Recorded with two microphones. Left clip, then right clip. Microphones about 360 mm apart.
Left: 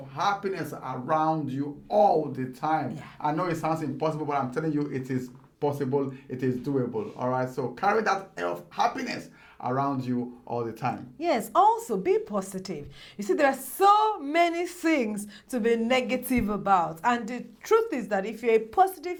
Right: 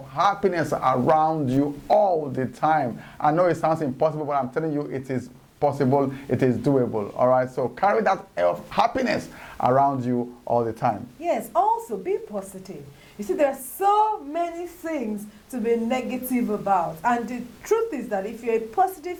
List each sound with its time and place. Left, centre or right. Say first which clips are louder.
0.2 s a man's voice: right 6 dB; right
9.6 s a man's voice: right 9 dB; right
11.2 s a woman's voice: left 2 dB; left
14.4 s a sound: left 4 dB; left
15.5 s a woman's voice: even; left
17.0 s a woman's voice: right 3 dB; left
17.7 s a woman's voice: even; left